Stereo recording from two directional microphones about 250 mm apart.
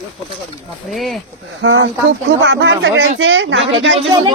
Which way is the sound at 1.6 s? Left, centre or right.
Right.